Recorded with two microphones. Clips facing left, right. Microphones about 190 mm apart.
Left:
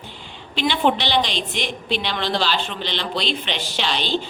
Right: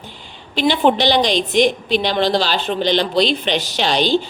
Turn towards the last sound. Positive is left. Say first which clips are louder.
# right 7 dB
turn(degrees=-45)  # may be behind; listen again after turning